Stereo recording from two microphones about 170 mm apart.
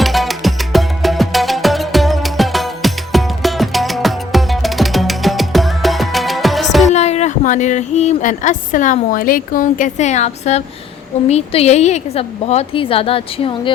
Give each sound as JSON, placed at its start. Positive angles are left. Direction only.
{"t": 0.0, "sound": "music", "side_deg": 0}
{"t": 6.8, "sound": "a woman's voice", "side_deg": 40}